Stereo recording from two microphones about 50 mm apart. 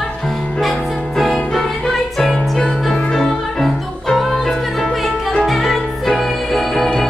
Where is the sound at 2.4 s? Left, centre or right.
Centre.